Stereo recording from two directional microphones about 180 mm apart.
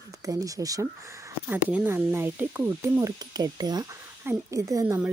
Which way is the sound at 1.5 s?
10° right (ahead or behind).